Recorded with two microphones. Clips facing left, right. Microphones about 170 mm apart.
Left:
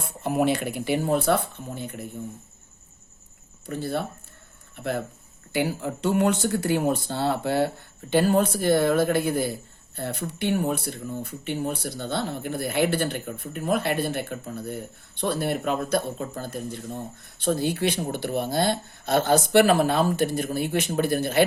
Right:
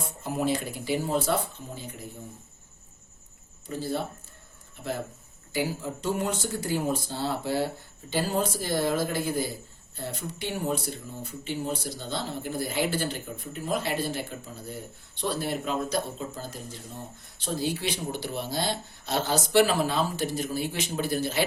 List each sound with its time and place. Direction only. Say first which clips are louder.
0.2 s speech: left 5 dB; 65° left (ahead or behind)
3.7 s speech: left 2 dB; 60° left (ahead or behind)